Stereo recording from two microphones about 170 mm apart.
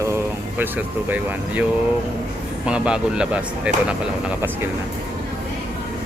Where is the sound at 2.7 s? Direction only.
5° right (ahead or behind).